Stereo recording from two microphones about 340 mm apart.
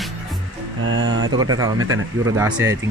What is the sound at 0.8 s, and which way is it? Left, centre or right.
Speech, right.